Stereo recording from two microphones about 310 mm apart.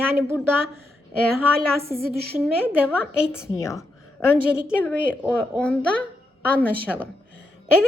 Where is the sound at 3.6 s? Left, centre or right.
Centre.